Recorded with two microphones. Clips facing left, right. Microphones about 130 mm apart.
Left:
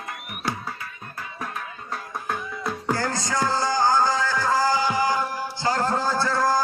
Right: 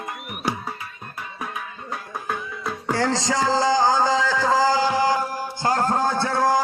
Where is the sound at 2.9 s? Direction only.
85° right.